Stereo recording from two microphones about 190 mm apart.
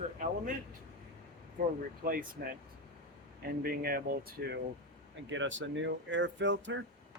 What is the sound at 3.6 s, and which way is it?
Speech, 55° right (ahead or behind).